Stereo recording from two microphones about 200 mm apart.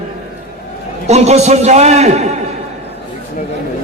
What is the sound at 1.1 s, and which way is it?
A man's voice, 35° right (ahead or behind).